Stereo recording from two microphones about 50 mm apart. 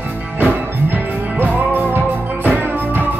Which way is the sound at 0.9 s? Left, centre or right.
Right.